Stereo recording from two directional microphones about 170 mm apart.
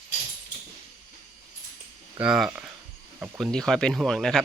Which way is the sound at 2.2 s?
5° right (ahead or behind).